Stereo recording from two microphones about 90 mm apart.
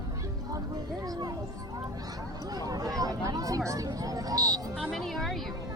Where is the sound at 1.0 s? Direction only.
45° right (ahead or behind).